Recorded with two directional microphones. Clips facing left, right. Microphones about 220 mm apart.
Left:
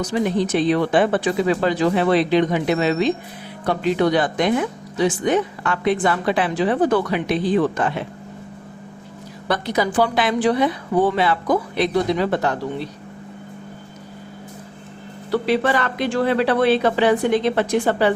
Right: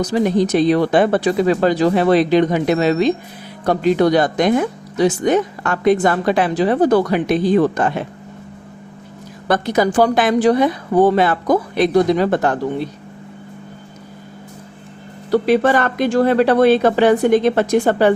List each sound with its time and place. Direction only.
0.0 s speech: 40° right (ahead or behind)
9.5 s speech: 45° right (ahead or behind)
15.3 s speech: 45° right (ahead or behind)